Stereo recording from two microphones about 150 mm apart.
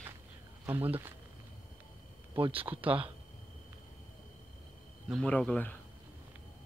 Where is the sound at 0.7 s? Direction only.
15° right (ahead or behind).